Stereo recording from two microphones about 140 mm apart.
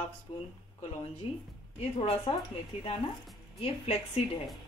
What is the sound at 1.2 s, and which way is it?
Speech, 45° left (ahead or behind).